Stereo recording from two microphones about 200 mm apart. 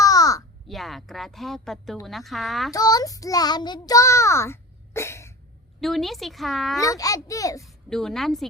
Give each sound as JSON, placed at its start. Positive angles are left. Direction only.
{"t": 0.0, "sound": "crow", "side_deg": 15}
{"t": 0.7, "sound": "speech", "side_deg": 0}
{"t": 2.7, "sound": "child singing", "side_deg": 20}
{"t": 5.8, "sound": "speech", "side_deg": 0}
{"t": 6.8, "sound": "a child's voice", "side_deg": 15}
{"t": 7.6, "sound": "speech", "side_deg": 0}